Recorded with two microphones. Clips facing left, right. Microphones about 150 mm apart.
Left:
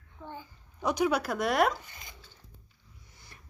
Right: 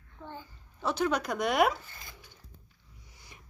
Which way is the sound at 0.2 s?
15° left (ahead or behind).